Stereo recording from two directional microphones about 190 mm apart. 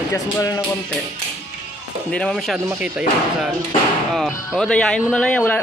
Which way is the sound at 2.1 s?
5° left (ahead or behind).